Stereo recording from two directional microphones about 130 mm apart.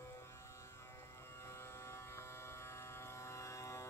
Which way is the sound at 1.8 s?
20° left (ahead or behind).